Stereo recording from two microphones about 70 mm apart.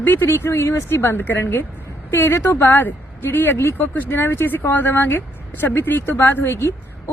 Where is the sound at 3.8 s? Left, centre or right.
Left.